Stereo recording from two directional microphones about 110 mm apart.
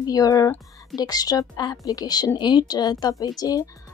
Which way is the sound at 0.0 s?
35° left (ahead or behind).